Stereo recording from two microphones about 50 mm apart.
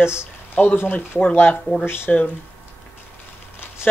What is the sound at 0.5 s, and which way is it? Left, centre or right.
Speech, left.